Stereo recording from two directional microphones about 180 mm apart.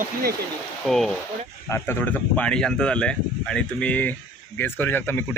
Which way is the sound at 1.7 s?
10° left (ahead or behind).